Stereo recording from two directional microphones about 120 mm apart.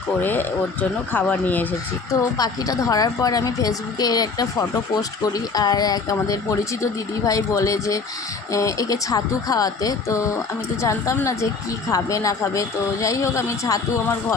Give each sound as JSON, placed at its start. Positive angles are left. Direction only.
{"t": 0.2, "sound": "speech", "side_deg": 15}
{"t": 2.4, "sound": "a woman's voice", "side_deg": 30}